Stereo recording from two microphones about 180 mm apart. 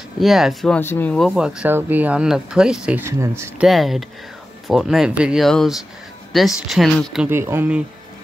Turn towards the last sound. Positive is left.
turn(degrees=-10)  # may be behind; listen again after turning